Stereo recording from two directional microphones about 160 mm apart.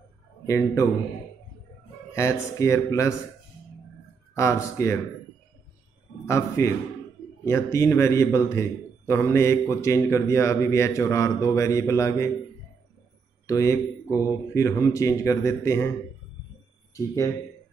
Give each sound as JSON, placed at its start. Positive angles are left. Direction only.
{"t": 0.5, "sound": "a man's voice", "side_deg": 20}
{"t": 2.1, "sound": "a man's voice", "side_deg": 20}
{"t": 4.4, "sound": "a man's voice", "side_deg": 20}
{"t": 6.2, "sound": "a man's voice", "side_deg": 20}
{"t": 13.5, "sound": "a man's voice", "side_deg": 20}
{"t": 14.0, "sound": "speech", "side_deg": -15}
{"t": 14.5, "sound": "a man's voice", "side_deg": 20}
{"t": 16.9, "sound": "a man's voice", "side_deg": 20}